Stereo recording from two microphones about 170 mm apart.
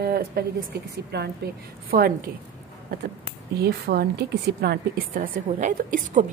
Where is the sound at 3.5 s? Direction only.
70° right (ahead or behind).